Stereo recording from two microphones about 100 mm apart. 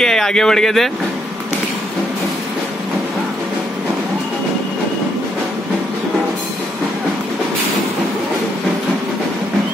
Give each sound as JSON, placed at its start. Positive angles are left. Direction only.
{"t": 0.0, "sound": "speech", "side_deg": 5}